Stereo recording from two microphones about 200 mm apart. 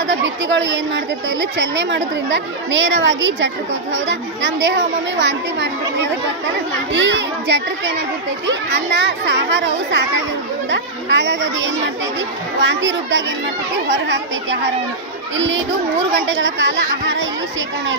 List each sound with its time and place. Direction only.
0.0 s a woman's voice: 65° right (ahead or behind)
6.9 s a woman's voice: 65° right (ahead or behind)